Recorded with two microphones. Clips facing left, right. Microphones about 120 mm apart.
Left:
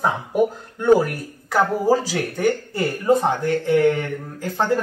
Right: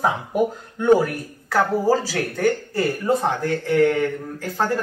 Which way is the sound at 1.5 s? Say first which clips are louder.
Left 1 dB; 15° left (ahead or behind).